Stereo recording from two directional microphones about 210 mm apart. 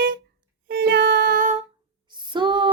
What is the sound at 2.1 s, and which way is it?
Female singing, 20° right (ahead or behind).